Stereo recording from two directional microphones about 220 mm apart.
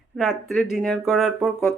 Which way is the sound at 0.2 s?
Centre (ahead or behind).